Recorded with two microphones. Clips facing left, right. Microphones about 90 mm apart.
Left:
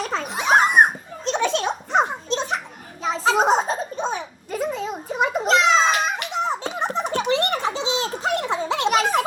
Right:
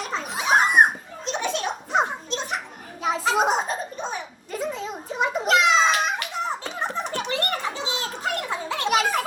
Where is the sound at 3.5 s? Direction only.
25° left (ahead or behind).